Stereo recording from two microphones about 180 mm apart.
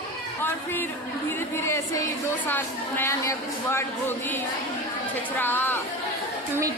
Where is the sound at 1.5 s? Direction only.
15° left (ahead or behind).